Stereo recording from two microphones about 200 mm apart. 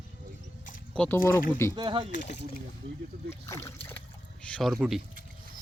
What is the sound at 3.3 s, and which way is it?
Speech, 15° left (ahead or behind).